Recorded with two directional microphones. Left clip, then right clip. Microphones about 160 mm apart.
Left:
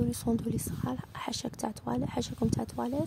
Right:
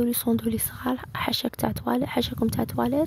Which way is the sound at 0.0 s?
30° right (ahead or behind).